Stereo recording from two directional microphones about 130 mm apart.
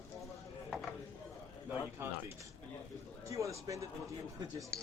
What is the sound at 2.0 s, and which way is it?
Pigeon, 20° right (ahead or behind).